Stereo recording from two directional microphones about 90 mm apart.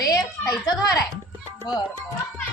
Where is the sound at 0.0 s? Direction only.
45° left (ahead or behind).